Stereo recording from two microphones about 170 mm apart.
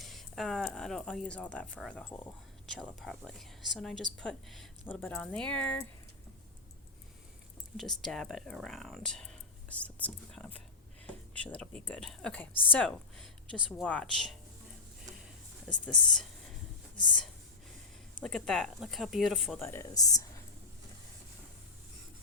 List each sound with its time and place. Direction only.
0.0 s speech: centre (ahead or behind)
7.8 s speech: centre (ahead or behind)
18.2 s speech: 5° left (ahead or behind)
19.5 s speech: 15° left (ahead or behind)